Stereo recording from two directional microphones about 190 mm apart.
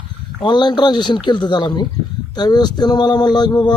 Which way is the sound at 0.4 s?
25° left (ahead or behind).